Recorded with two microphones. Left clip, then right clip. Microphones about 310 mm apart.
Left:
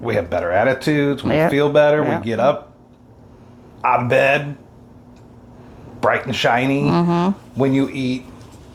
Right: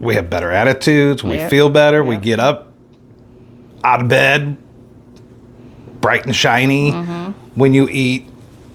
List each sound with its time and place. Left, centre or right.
0.0 s speech: right
3.8 s speech: right
6.0 s speech: right
6.9 s speech: left
7.5 s speech: right